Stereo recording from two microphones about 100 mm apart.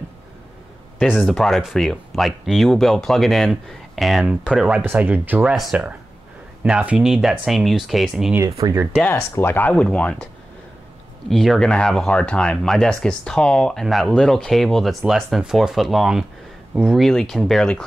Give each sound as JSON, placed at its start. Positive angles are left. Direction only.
{"t": 1.1, "sound": "speech", "side_deg": 5}
{"t": 5.5, "sound": "speech", "side_deg": -5}
{"t": 8.4, "sound": "speech", "side_deg": -35}
{"t": 9.1, "sound": "speech", "side_deg": 25}
{"t": 11.2, "sound": "speech", "side_deg": 0}